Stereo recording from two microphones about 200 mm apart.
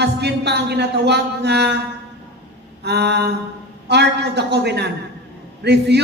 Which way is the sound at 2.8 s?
55° right (ahead or behind).